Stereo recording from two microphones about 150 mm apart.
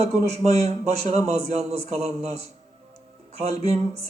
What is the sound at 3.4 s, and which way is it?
Speech, 45° right (ahead or behind).